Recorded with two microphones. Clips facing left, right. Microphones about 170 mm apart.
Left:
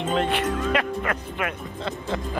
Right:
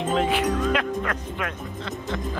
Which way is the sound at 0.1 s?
Centre (ahead or behind).